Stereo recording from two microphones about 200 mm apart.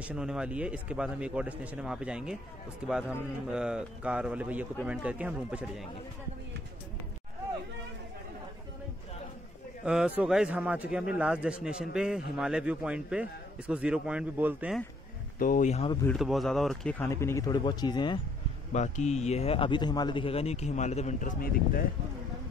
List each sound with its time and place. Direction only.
0.0 s a man's voice: 5° right (ahead or behind)
9.8 s a man's voice: 5° right (ahead or behind)
15.3 s a man's voice: 40° left (ahead or behind)
16.1 s a man's voice: centre (ahead or behind)
17.0 s speech: 15° left (ahead or behind)
18.7 s a man's voice: 35° left (ahead or behind)